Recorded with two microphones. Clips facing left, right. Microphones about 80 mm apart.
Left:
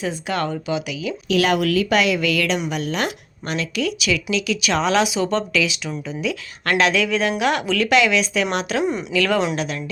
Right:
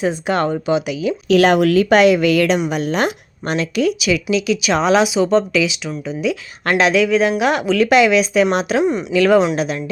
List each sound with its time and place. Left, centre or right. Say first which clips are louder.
0.0 s speech: right 6 dB; right
4.0 s speech: right 5 dB; centre
6.7 s speech: right 4 dB; centre
8.8 s speech: right 5 dB; centre
9.1 s speech: right 7 dB; centre